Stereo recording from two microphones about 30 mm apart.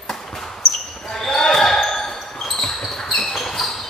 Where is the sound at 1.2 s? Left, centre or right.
Centre.